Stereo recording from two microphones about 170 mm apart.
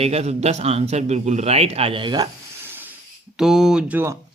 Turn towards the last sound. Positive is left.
turn(degrees=-15)  # may be behind; listen again after turning